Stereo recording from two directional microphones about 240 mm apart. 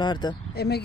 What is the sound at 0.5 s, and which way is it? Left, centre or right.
Speech, left.